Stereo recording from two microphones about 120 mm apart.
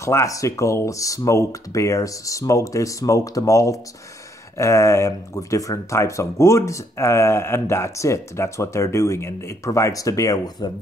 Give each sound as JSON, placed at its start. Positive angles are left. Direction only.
{"t": 0.0, "sound": "speech", "side_deg": 25}